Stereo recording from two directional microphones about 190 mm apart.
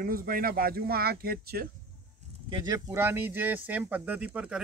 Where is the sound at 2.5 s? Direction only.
25° right (ahead or behind).